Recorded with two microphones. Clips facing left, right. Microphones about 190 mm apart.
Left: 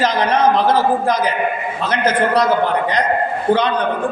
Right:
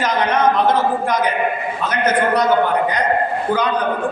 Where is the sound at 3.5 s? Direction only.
30° left (ahead or behind).